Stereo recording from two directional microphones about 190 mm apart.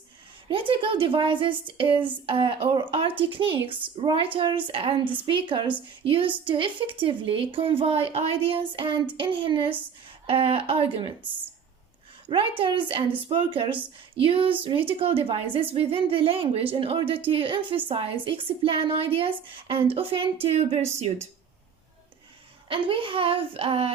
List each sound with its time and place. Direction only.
0.4 s a woman's voice: 25° right (ahead or behind)
12.3 s a woman's voice: 25° right (ahead or behind)
22.7 s a woman's voice: 25° right (ahead or behind)